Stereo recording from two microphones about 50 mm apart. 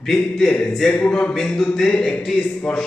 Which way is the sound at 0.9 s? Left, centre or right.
Left.